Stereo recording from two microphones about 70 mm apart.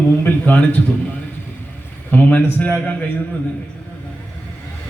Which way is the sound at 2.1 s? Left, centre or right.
Left.